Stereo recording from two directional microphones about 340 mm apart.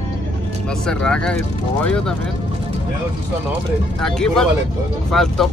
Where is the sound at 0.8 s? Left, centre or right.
Centre.